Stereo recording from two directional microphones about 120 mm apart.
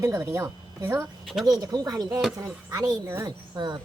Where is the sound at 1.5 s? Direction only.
30° right (ahead or behind).